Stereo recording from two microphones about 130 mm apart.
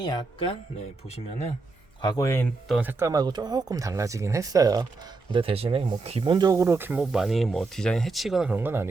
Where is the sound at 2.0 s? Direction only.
35° left (ahead or behind).